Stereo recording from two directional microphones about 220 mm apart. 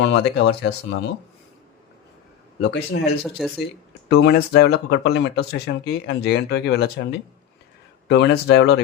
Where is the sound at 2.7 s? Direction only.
45° left (ahead or behind).